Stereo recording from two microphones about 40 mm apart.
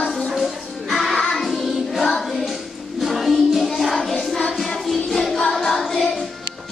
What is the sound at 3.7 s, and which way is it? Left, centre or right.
Music, centre.